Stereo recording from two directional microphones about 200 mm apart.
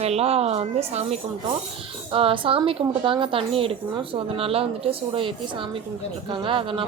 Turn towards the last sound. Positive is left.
turn(degrees=-25)  # may be behind; listen again after turning